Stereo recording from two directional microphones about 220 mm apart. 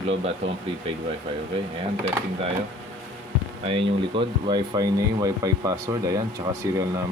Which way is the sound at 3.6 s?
25° right (ahead or behind).